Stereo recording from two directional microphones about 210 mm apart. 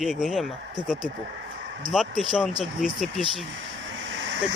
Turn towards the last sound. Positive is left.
turn(degrees=-60)  # may be behind; listen again after turning